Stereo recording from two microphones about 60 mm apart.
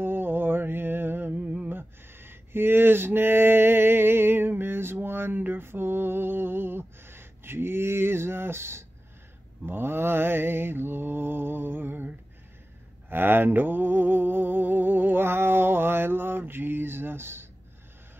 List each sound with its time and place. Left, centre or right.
0.0 s mantra: right
1.4 s a sound: right
1.7 s mantra: right